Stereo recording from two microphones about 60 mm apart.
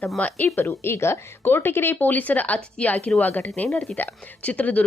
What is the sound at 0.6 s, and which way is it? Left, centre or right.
Speech, left.